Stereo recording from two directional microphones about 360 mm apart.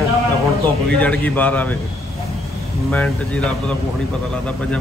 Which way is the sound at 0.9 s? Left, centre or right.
Centre.